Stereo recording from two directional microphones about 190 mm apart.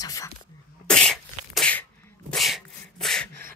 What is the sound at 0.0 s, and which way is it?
Sneeze, 20° left (ahead or behind).